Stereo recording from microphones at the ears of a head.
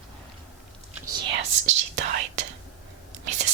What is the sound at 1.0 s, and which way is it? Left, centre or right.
Whispering, right.